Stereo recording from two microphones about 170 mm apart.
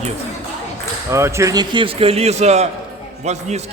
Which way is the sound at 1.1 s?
15° right (ahead or behind).